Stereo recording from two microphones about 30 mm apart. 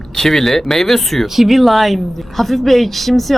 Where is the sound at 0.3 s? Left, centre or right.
Centre.